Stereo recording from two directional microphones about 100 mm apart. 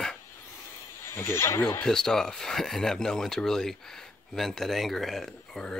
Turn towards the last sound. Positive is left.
turn(degrees=0)  # may be behind; listen again after turning